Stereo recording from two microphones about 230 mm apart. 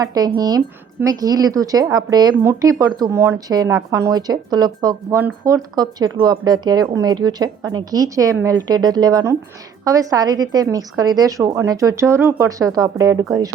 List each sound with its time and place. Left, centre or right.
0.0 s speech: centre